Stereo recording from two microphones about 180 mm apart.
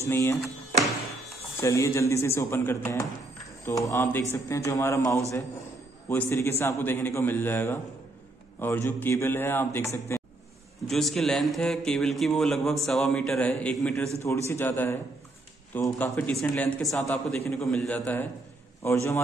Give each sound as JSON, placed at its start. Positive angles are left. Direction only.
{"t": 0.0, "sound": "a man's voice", "side_deg": 15}
{"t": 1.6, "sound": "a man's voice", "side_deg": 15}
{"t": 10.1, "sound": "a sound", "side_deg": 15}
{"t": 10.9, "sound": "mantra", "side_deg": 0}
{"t": 14.2, "sound": "a man's voice", "side_deg": 15}